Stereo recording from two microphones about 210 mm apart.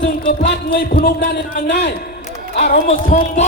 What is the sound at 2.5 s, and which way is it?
Speech, 35° left (ahead or behind).